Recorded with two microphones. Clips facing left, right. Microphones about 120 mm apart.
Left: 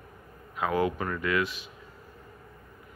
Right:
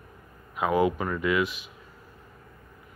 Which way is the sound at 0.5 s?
15° right (ahead or behind).